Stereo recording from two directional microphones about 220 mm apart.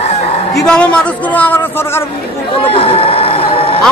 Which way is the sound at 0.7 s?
5° left (ahead or behind).